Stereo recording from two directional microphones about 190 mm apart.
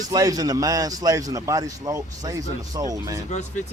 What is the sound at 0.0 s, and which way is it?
A man's voice, 20° right (ahead or behind).